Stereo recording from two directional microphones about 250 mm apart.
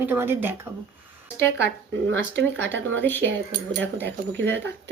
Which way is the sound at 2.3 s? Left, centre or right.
Right.